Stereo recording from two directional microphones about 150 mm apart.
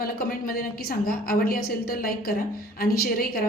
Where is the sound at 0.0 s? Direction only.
75° left (ahead or behind).